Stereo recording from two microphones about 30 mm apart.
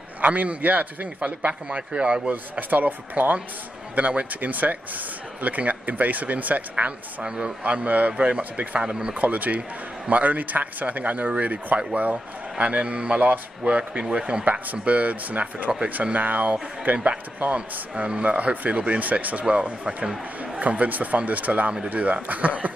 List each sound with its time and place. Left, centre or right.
0.2 s speech: right
1.2 s a man's voice: right
2.7 s speech: right
3.9 s speech: right
7.2 s a man's voice: right
7.6 s speech: right
8.8 s a man's voice: right
9.2 s speech: right
14.0 s a man's voice: right
14.4 s speech: right
16.8 s speech: right
19.5 s speech: right